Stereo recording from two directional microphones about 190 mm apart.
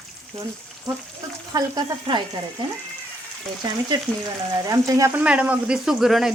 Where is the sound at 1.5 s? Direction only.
20° right (ahead or behind).